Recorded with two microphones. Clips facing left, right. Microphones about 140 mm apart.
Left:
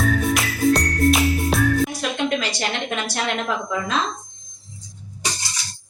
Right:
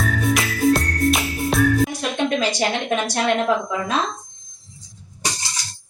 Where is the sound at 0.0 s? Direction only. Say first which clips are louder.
Left 1 dB; centre (ahead or behind).